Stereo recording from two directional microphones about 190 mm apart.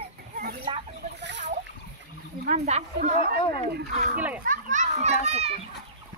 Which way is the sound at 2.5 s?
35° right (ahead or behind).